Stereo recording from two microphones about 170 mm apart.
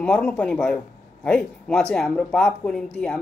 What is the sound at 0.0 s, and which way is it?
Speech, 5° left (ahead or behind).